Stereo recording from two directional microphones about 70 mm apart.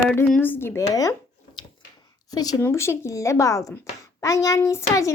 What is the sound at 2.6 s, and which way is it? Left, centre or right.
Speech, left.